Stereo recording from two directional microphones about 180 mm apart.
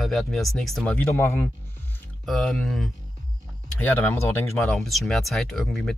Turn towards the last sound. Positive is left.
turn(degrees=0)  # may be behind; listen again after turning